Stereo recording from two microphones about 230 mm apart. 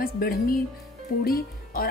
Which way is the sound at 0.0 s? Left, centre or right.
Left.